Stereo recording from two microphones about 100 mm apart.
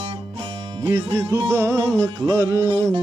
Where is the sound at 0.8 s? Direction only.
35° right (ahead or behind).